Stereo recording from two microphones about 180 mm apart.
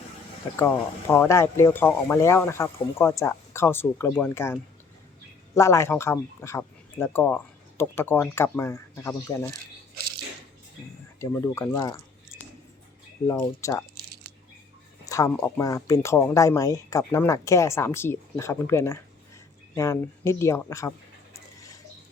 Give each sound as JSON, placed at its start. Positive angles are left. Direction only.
{"t": 0.5, "sound": "speech", "side_deg": 15}
{"t": 11.2, "sound": "speech", "side_deg": 15}
{"t": 13.4, "sound": "speech", "side_deg": 15}
{"t": 15.0, "sound": "speech", "side_deg": 20}